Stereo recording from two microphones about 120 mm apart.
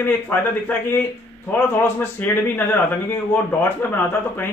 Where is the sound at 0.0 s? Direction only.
15° left (ahead or behind).